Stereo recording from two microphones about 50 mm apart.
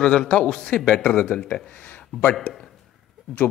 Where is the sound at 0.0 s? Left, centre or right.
Centre.